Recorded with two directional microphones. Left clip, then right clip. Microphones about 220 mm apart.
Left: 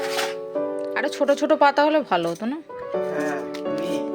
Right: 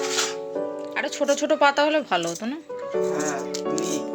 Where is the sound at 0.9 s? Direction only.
20° left (ahead or behind).